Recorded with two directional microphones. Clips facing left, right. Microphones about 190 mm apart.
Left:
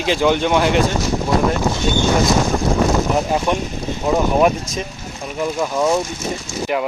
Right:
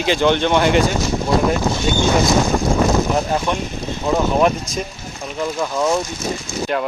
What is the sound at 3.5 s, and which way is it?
Speech, 15° left (ahead or behind).